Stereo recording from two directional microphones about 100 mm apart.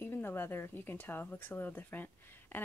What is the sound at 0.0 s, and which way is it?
Speech, 20° left (ahead or behind).